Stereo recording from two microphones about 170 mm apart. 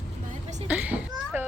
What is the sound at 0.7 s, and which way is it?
Children playing, 10° right (ahead or behind).